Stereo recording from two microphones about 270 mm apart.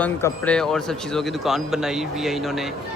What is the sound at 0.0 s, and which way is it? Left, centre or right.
Speech, centre.